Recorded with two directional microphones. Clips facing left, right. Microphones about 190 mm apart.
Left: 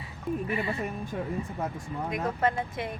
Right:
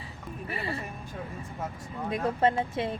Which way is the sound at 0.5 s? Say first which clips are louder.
Left 4 dB; 35° right (ahead or behind).